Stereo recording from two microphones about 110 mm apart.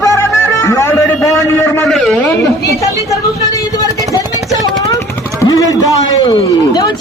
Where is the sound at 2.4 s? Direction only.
30° left (ahead or behind).